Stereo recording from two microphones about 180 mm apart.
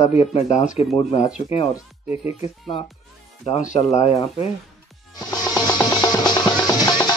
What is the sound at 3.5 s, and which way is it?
Speech, 40° left (ahead or behind).